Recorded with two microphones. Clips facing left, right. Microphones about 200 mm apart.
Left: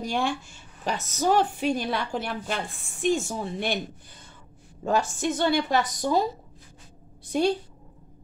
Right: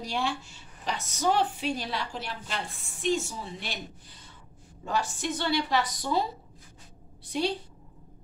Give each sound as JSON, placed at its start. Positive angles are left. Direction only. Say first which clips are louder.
{"t": 0.0, "sound": "a woman's voice", "louder": "left 4 dB", "side_deg": 50}
{"t": 4.8, "sound": "a woman's voice", "louder": "left 6 dB", "side_deg": 45}
{"t": 7.3, "sound": "a woman's voice", "louder": "left 5 dB", "side_deg": 45}